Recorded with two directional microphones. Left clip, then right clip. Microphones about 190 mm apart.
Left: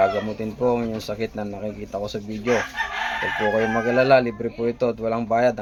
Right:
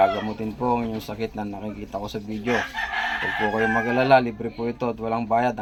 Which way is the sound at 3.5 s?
25° left (ahead or behind).